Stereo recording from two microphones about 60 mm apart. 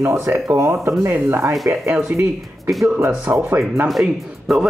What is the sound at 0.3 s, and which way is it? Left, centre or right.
Speech, right.